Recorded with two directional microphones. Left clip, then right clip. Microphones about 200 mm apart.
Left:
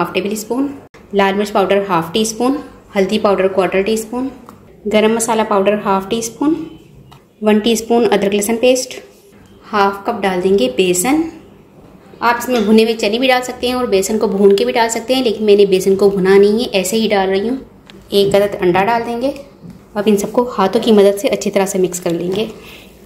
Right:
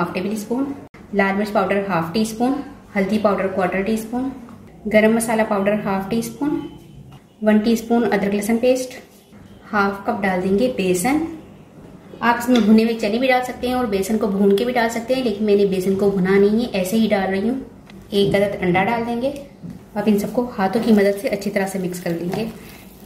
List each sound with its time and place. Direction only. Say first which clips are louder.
0.5 s a woman's voice: left 5 dB; 45° left (ahead or behind)
4.8 s a woman's voice: left 3 dB; 35° left (ahead or behind)
7.4 s a woman's voice: left 5 dB; 40° left (ahead or behind)
12.2 s a woman's voice: left 3 dB; 45° left (ahead or behind)